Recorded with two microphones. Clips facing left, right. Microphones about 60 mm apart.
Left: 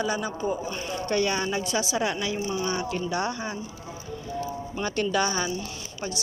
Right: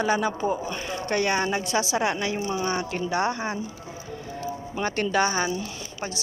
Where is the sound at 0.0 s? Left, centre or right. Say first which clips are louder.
Right 4 dB; right.